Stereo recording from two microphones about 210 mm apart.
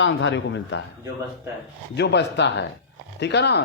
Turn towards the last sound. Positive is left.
turn(degrees=55)  # may be behind; listen again after turning